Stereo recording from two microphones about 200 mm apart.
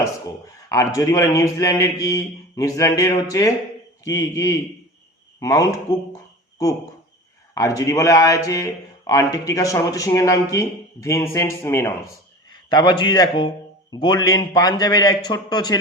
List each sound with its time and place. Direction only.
0.0 s speech: 15° left (ahead or behind)
7.5 s a man's voice: 15° left (ahead or behind)